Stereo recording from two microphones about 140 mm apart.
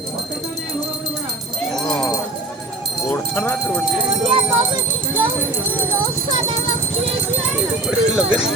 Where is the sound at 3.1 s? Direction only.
15° left (ahead or behind).